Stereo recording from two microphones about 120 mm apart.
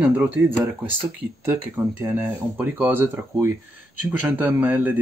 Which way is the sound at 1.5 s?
15° right (ahead or behind).